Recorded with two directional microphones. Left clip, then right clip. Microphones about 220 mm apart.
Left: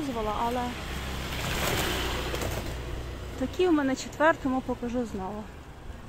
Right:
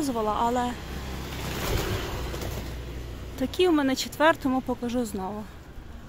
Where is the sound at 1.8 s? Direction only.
45° left (ahead or behind).